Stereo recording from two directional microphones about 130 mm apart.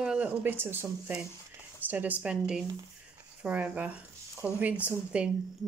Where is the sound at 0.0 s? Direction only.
10° right (ahead or behind).